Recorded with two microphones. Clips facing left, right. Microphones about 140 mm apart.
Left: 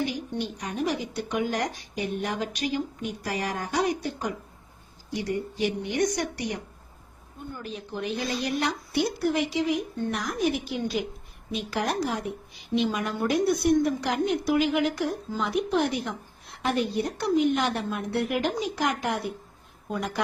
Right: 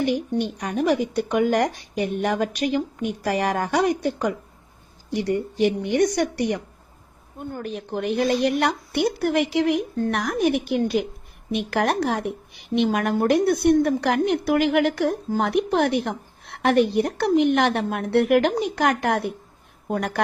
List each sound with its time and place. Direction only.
0.0 s a woman's voice: 60° right (ahead or behind)